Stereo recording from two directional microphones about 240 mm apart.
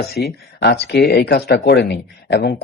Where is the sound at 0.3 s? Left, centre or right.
Left.